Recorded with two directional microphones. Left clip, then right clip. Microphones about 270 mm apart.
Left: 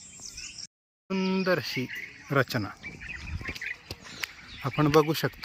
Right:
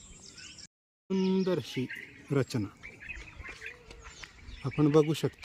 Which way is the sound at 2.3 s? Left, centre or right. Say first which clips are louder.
Left 5 dB; centre.